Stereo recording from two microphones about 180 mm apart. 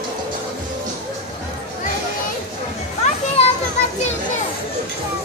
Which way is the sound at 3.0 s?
35° left (ahead or behind).